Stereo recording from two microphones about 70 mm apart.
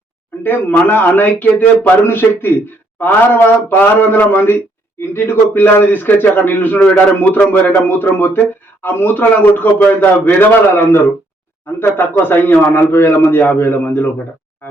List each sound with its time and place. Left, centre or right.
0.4 s a man's voice: left